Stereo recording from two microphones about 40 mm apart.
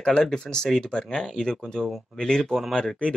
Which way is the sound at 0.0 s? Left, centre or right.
Centre.